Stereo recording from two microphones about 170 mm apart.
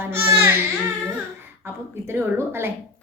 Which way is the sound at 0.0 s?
15° right (ahead or behind).